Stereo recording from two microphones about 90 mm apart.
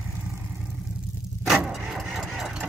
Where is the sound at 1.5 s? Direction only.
5° right (ahead or behind).